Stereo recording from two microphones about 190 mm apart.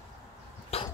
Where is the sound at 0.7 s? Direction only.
30° left (ahead or behind).